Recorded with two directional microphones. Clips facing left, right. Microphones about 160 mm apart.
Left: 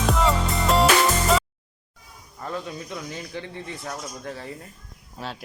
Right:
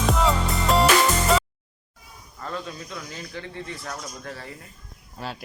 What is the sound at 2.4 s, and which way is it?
Speech, 15° left (ahead or behind).